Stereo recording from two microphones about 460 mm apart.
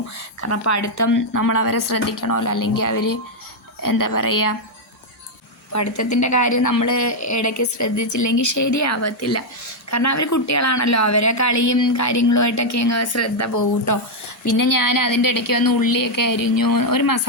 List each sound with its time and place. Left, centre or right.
0.4 s a woman's voice: left
5.7 s a woman's voice: left